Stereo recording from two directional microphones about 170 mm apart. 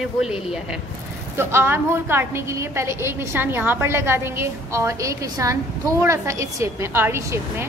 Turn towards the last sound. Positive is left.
turn(degrees=-15)  # may be behind; listen again after turning